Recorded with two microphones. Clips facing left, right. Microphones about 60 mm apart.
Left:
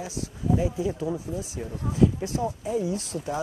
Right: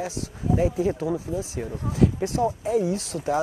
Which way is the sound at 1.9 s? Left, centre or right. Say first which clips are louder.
Right 1 dB; right.